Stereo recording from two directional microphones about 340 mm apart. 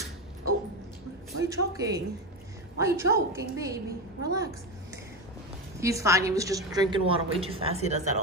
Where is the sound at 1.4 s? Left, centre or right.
Centre.